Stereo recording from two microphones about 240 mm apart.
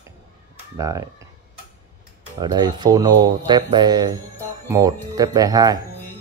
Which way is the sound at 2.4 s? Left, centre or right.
Centre.